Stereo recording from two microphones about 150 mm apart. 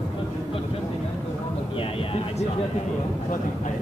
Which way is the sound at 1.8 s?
40° left (ahead or behind).